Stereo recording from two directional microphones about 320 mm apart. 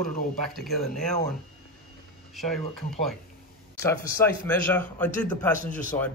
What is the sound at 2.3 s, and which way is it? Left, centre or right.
A man's voice, centre.